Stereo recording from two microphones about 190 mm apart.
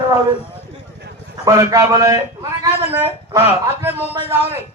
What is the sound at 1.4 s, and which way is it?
Speech, 15° right (ahead or behind).